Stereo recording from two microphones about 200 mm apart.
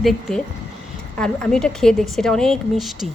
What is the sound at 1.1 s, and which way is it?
A woman's voice, 5° left (ahead or behind).